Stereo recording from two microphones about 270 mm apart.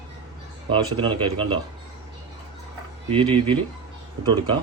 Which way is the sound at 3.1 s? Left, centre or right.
Centre.